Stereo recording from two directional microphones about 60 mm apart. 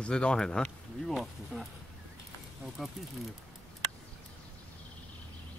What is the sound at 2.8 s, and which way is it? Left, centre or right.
Speech, centre.